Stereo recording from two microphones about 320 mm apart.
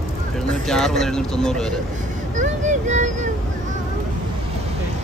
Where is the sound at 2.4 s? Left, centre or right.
Right.